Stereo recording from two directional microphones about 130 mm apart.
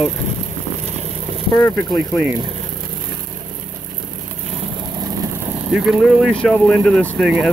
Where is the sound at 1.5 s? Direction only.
25° left (ahead or behind).